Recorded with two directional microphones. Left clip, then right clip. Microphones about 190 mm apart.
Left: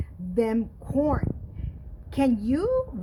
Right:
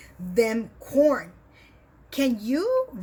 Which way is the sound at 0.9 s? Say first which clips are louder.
Right 5 dB; 40° left (ahead or behind).